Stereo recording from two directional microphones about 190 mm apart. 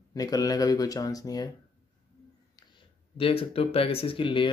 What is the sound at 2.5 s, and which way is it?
Speech, 30° left (ahead or behind).